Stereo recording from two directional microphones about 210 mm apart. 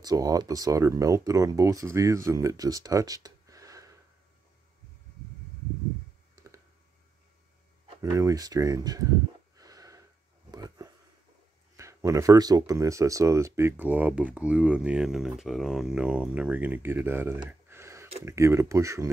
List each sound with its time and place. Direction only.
0.0 s speech: 15° right (ahead or behind)
6.3 s clicking: 15° right (ahead or behind)
8.0 s speech: 15° right (ahead or behind)
9.6 s a sound: 15° right (ahead or behind)
11.7 s speech: 15° right (ahead or behind)